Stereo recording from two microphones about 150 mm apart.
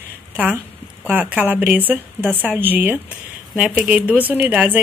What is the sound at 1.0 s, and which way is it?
A woman's voice, 10° right (ahead or behind).